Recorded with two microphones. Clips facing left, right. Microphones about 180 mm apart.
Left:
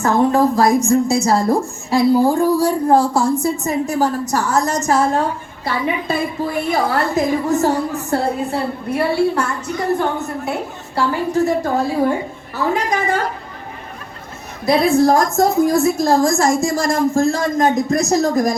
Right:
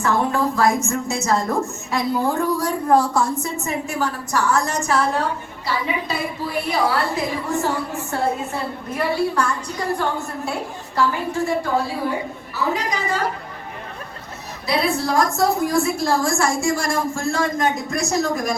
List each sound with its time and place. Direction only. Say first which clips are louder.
0.0 s a woman's voice: left 6 dB; 40° left (ahead or behind); by 10.5 s 20° left (ahead or behind)
10.9 s a woman's voice: left 4 dB; 40° left (ahead or behind)
12.5 s a woman's voice: left 5 dB; 50° left (ahead or behind)
14.7 s a woman's voice: left 8 dB; 45° left (ahead or behind)